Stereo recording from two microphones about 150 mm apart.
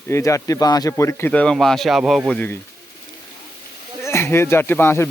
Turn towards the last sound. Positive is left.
turn(degrees=15)  # may be behind; listen again after turning